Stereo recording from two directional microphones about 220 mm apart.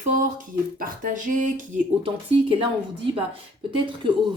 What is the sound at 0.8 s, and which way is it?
Speech, 35° right (ahead or behind).